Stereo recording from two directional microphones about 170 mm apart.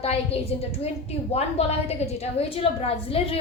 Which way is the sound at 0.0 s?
35° left (ahead or behind).